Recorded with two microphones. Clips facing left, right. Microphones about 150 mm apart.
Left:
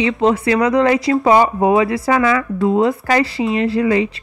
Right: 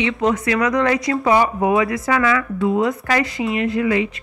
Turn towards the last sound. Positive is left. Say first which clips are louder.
# left 3 dB
turn(degrees=35)  # may be behind; listen again after turning